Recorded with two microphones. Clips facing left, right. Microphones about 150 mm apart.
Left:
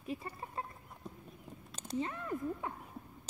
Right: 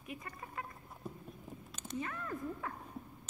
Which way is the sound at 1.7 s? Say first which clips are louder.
Left 4 dB; 35° left (ahead or behind).